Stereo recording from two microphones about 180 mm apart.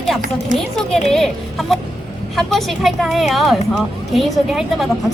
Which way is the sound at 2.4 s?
Centre (ahead or behind).